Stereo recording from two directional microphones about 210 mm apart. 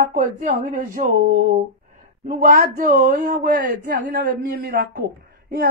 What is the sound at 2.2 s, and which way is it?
A woman's voice, 40° right (ahead or behind).